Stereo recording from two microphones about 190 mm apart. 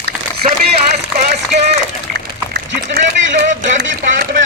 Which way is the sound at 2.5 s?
60° right (ahead or behind).